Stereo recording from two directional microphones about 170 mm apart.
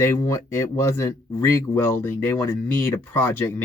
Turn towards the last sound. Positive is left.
turn(degrees=10)  # may be behind; listen again after turning